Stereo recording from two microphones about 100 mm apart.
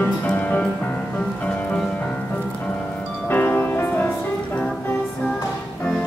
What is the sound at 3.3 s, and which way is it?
Music, 20° left (ahead or behind).